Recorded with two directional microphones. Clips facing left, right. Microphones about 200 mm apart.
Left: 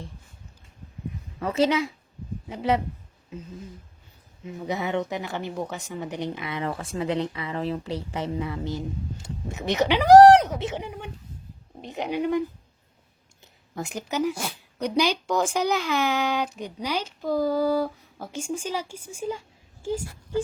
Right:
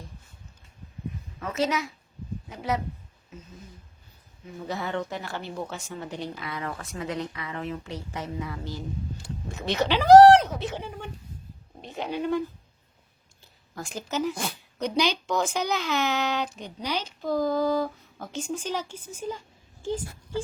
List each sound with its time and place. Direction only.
1.4 s a woman's voice: 30° left (ahead or behind)
4.4 s speech: 20° left (ahead or behind)
13.4 s a woman's voice: 20° left (ahead or behind)